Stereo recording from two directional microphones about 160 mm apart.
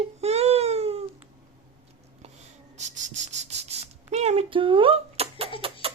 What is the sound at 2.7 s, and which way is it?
Cricket, 45° right (ahead or behind).